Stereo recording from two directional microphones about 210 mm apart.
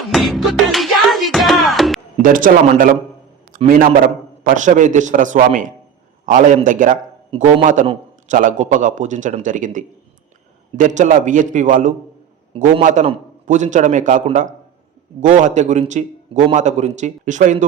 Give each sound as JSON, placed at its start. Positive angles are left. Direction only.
{"t": 0.1, "sound": "music", "side_deg": 0}
{"t": 2.2, "sound": "a man's voice", "side_deg": -40}